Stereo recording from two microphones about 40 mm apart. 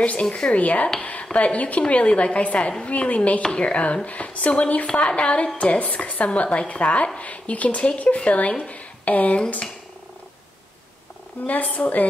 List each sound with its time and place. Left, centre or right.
0.0 s a woman's voice: left
11.4 s speech: left